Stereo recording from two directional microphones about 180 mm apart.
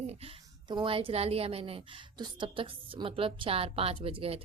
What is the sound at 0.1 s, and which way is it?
Speech, 30° right (ahead or behind).